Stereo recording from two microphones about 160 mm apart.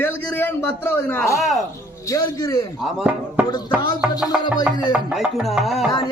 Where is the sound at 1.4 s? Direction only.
Centre (ahead or behind).